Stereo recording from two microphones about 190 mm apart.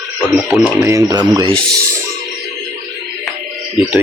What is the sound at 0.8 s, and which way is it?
Speech, 15° right (ahead or behind).